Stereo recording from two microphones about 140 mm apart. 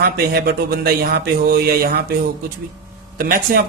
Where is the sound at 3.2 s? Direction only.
90° right.